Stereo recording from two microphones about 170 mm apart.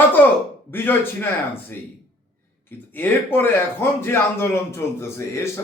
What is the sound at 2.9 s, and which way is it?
A man's voice, 10° left (ahead or behind).